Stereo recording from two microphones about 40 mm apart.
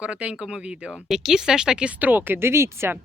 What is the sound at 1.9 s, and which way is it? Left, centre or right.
Speech, right.